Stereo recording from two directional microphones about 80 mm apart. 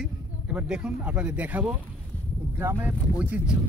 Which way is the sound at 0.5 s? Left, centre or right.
Centre.